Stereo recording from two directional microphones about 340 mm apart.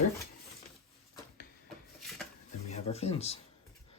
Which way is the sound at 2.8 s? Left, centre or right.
Centre.